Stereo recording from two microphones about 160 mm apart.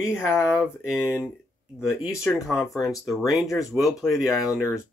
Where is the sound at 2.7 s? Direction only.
Centre (ahead or behind).